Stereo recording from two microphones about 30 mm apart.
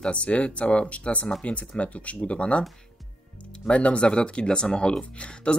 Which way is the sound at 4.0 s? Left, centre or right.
Left.